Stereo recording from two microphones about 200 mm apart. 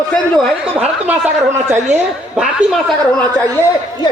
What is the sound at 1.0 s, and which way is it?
A woman's voice, 10° right (ahead or behind).